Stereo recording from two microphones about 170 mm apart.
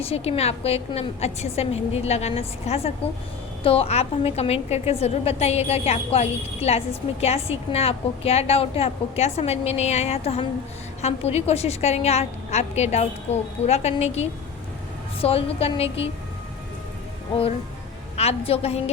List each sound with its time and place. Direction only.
0.0 s a woman's voice: 35° left (ahead or behind)
18.2 s a woman's voice: 35° left (ahead or behind)